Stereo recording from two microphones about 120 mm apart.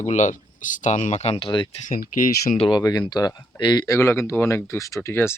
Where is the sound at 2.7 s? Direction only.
35° left (ahead or behind).